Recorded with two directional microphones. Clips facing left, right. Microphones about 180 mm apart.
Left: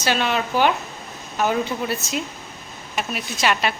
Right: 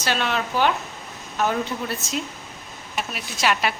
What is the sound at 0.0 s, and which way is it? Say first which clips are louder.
Speech: left 3 dB; centre (ahead or behind).